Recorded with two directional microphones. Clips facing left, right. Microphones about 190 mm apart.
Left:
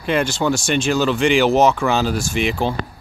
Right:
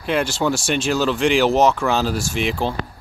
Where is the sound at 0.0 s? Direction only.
Centre (ahead or behind).